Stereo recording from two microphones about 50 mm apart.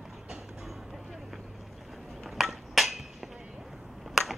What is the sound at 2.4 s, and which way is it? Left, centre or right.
Hammer, centre.